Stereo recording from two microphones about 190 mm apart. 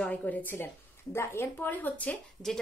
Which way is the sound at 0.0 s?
10° left (ahead or behind).